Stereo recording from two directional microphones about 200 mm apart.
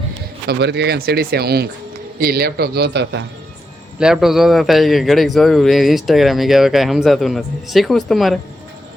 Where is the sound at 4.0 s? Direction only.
5° right (ahead or behind).